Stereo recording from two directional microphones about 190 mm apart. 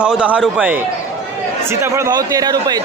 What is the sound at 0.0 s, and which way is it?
A man's voice, 5° right (ahead or behind).